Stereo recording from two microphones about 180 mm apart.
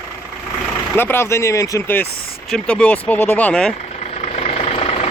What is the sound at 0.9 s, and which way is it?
Speech, 10° left (ahead or behind).